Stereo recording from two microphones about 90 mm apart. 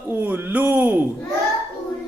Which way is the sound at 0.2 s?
20° right (ahead or behind).